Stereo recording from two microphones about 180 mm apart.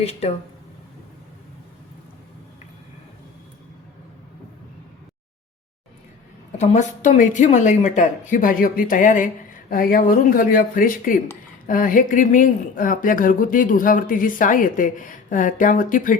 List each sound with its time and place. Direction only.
0.0 s speech: 35° left (ahead or behind)
6.6 s speech: 40° left (ahead or behind)